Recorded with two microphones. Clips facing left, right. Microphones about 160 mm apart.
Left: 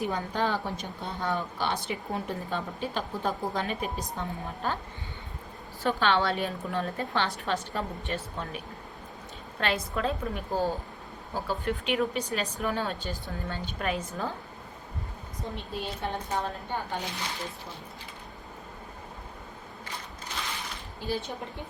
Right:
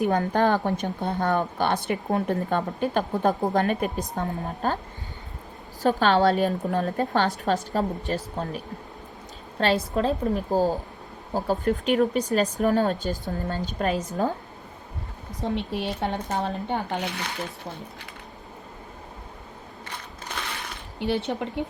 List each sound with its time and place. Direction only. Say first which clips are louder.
0.0 s a woman's voice: right 7 dB; 50° right (ahead or behind)
5.8 s a woman's voice: right 6 dB; 40° right (ahead or behind)
15.4 s speech: right 8 dB; 75° right (ahead or behind)
20.3 s a sound: right 3 dB; 55° right (ahead or behind)
21.0 s speech: right 7 dB; 75° right (ahead or behind)